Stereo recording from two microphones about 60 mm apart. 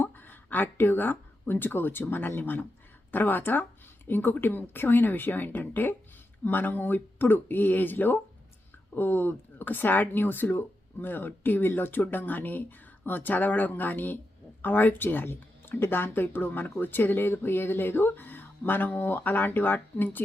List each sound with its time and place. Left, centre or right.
0.0 s speech: left